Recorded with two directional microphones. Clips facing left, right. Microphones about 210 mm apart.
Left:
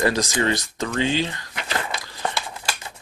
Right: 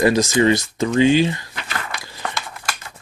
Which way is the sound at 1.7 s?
25° left (ahead or behind).